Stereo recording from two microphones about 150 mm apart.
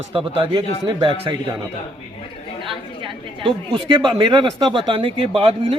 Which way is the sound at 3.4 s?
35° right (ahead or behind).